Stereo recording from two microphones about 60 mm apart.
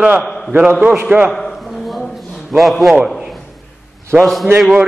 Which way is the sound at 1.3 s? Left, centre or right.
Centre.